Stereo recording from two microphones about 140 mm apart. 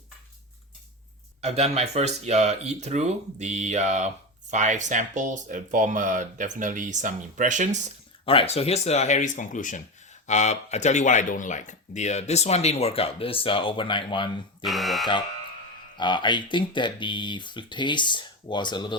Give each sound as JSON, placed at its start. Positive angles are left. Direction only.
{"t": 1.4, "sound": "speech", "side_deg": -50}
{"t": 8.2, "sound": "speech", "side_deg": 40}
{"t": 14.6, "sound": "speech", "side_deg": 0}
{"t": 16.0, "sound": "speech", "side_deg": 35}